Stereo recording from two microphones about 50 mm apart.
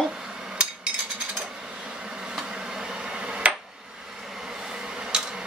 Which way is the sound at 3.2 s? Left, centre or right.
Right.